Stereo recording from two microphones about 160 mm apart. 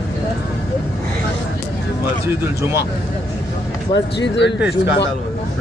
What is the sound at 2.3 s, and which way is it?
Speech, 15° right (ahead or behind).